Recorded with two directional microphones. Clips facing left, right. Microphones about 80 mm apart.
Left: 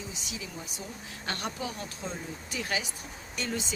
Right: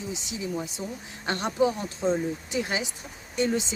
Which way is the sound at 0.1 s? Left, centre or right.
Right.